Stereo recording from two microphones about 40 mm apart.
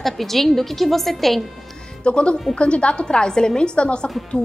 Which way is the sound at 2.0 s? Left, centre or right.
Left.